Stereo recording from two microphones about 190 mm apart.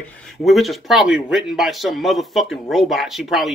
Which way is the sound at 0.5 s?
Centre (ahead or behind).